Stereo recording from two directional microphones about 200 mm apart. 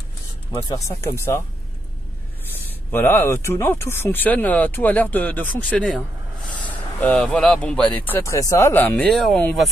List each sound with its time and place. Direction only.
0.6 s speech: 15° left (ahead or behind)
2.9 s speech: 10° left (ahead or behind)